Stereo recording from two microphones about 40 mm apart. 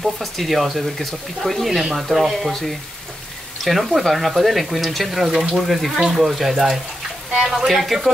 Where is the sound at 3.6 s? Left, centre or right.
Centre.